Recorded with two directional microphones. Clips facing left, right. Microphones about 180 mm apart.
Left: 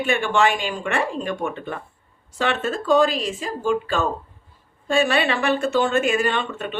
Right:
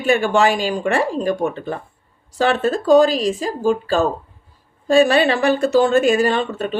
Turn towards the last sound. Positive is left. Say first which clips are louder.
# right 5 dB
turn(degrees=-35)  # may be behind; listen again after turning